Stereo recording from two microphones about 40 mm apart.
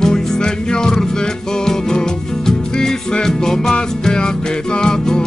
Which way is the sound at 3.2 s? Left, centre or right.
Centre.